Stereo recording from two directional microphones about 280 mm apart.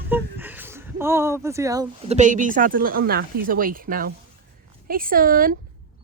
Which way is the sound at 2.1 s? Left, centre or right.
Right.